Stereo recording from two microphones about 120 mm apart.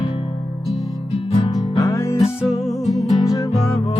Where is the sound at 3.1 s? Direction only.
30° left (ahead or behind).